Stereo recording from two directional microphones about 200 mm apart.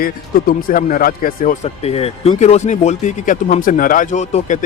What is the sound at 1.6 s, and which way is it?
Speech, 30° left (ahead or behind).